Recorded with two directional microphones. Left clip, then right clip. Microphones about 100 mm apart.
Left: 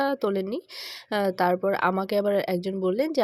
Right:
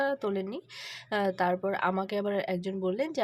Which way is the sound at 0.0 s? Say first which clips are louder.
Left 5 dB; 55° left (ahead or behind).